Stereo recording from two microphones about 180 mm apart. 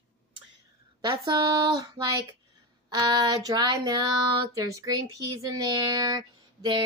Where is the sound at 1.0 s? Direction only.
25° right (ahead or behind).